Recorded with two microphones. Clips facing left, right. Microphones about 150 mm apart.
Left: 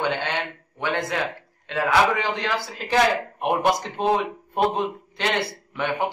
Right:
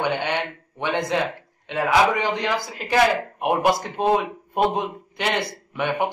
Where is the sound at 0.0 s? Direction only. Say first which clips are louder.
Right 2 dB; 15° right (ahead or behind).